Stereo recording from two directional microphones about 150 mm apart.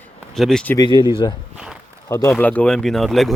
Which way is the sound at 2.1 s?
20° left (ahead or behind).